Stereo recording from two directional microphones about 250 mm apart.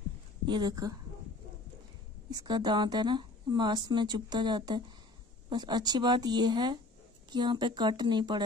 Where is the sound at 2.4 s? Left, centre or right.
Centre.